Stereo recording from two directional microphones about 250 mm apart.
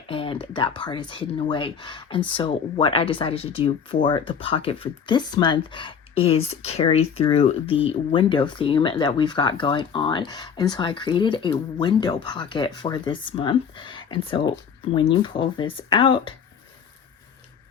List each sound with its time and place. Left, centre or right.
0.1 s speech: left